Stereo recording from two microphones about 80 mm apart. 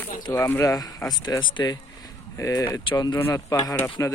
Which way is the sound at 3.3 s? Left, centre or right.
Left.